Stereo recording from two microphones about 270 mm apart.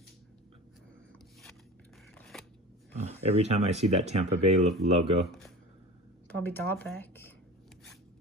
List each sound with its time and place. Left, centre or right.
2.1 s scissors: centre
3.2 s speech: right
5.2 s speech: centre